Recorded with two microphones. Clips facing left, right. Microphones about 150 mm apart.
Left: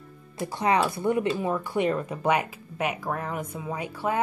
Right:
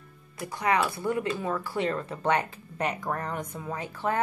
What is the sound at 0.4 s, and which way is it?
Speech, 25° left (ahead or behind).